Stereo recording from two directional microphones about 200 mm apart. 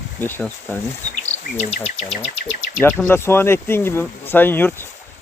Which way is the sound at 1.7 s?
35° left (ahead or behind).